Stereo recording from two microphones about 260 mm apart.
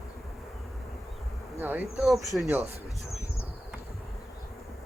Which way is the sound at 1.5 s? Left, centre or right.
Centre.